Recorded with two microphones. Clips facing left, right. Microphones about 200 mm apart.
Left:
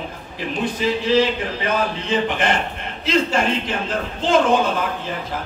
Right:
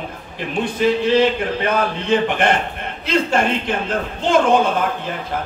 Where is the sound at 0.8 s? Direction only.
55° right (ahead or behind).